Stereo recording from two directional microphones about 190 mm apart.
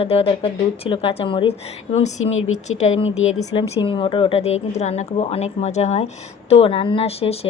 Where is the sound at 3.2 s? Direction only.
90° left.